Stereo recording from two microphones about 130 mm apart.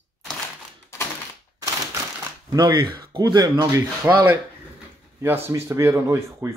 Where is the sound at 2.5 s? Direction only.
35° right (ahead or behind).